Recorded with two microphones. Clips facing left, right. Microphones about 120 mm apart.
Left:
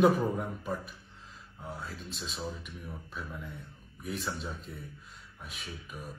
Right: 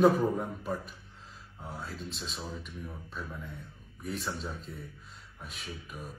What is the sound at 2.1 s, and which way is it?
Speech, centre (ahead or behind).